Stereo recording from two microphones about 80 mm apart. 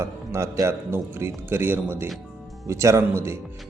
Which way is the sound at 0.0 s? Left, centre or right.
Right.